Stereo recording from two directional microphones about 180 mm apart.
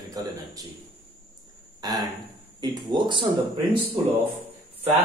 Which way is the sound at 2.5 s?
25° right (ahead or behind).